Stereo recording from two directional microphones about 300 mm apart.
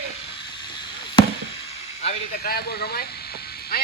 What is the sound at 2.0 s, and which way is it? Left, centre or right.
Quack, left.